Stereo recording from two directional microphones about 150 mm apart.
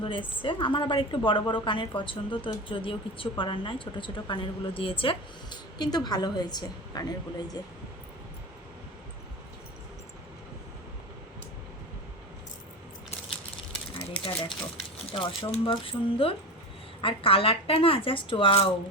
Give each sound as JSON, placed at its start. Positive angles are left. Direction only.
{"t": 0.0, "sound": "speech", "side_deg": 35}
{"t": 14.4, "sound": "speech", "side_deg": 35}